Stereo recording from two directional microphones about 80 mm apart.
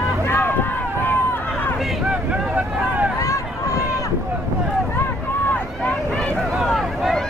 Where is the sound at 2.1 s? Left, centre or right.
Centre.